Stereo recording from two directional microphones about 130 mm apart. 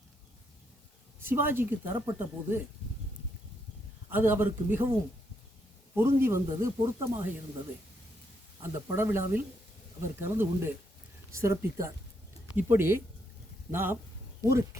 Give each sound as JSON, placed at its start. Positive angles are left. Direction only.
{"t": 1.2, "sound": "a woman's voice", "side_deg": -15}
{"t": 4.1, "sound": "a woman's voice", "side_deg": -15}
{"t": 8.6, "sound": "a woman's voice", "side_deg": -20}